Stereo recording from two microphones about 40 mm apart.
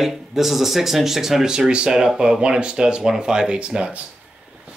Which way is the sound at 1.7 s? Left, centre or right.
Right.